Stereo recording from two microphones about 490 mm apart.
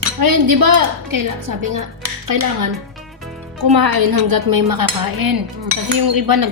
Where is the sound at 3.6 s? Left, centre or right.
Right.